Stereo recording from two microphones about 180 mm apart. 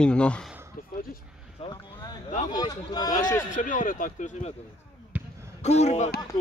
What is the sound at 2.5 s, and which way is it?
Speech, 25° left (ahead or behind).